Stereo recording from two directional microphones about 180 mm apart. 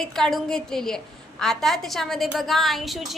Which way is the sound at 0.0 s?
Centre (ahead or behind).